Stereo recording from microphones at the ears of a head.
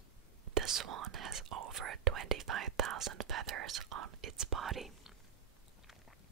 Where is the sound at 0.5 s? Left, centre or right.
Right.